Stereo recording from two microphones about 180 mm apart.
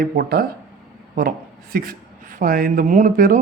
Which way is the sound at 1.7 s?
50° right (ahead or behind).